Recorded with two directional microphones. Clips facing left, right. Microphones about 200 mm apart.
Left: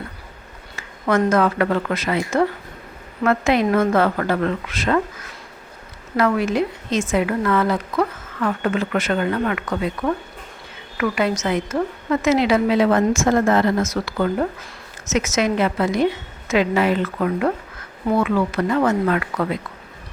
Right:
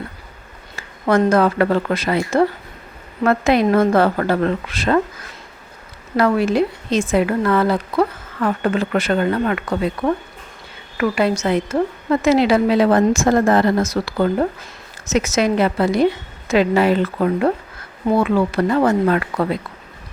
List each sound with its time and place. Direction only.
0.8 s a woman's voice: 30° right (ahead or behind)
6.1 s a woman's voice: 35° right (ahead or behind)